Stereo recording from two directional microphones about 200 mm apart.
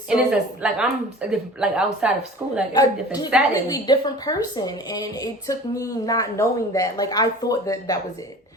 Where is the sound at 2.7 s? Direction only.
20° left (ahead or behind).